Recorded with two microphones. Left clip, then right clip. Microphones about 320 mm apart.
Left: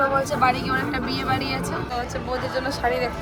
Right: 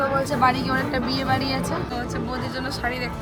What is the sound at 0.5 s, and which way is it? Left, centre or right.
Speech, right.